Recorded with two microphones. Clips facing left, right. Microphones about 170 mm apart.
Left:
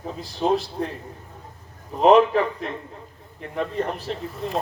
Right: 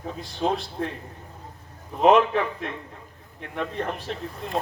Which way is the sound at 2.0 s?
35° left (ahead or behind).